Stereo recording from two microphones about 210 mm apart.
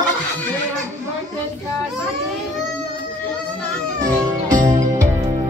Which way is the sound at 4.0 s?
15° right (ahead or behind).